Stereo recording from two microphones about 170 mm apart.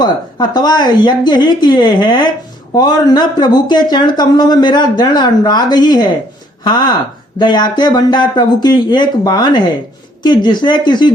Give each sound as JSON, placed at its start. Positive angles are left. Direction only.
{"t": 0.0, "sound": "speech", "side_deg": 25}